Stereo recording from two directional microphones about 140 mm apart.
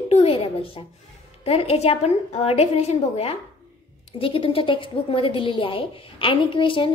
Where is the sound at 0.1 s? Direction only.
45° left (ahead or behind).